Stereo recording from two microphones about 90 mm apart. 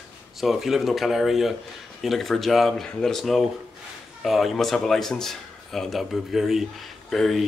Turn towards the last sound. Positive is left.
turn(degrees=0)  # may be behind; listen again after turning